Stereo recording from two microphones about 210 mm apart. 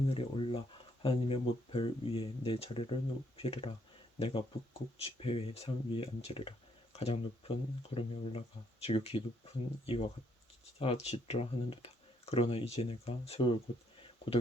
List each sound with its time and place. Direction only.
0.1 s speech: 25° left (ahead or behind)
10.8 s speech: 30° left (ahead or behind)